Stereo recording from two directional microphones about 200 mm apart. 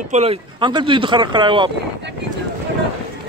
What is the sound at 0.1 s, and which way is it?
Speech, 30° right (ahead or behind).